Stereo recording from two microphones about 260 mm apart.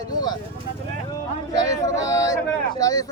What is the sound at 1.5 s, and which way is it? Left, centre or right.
Speech, centre.